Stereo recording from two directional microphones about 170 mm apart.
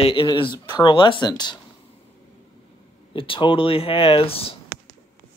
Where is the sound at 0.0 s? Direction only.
30° left (ahead or behind).